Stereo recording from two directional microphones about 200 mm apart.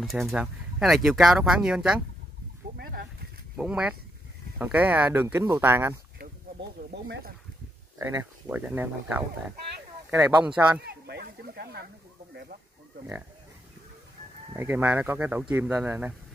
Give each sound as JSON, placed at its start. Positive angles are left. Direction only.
{"t": 0.0, "sound": "speech", "side_deg": 0}
{"t": 3.5, "sound": "speech", "side_deg": -5}
{"t": 7.1, "sound": "speech", "side_deg": -50}
{"t": 8.0, "sound": "speech", "side_deg": -15}
{"t": 10.8, "sound": "speech", "side_deg": -55}
{"t": 14.5, "sound": "speech", "side_deg": -10}